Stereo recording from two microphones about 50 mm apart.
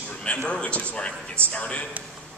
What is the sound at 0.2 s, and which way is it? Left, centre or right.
A man's voice, left.